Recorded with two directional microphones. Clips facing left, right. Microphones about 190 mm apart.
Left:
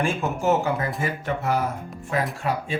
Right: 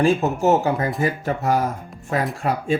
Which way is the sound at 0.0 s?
40° right (ahead or behind).